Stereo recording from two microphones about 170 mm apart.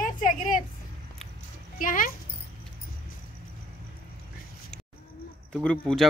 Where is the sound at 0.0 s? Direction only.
50° left (ahead or behind).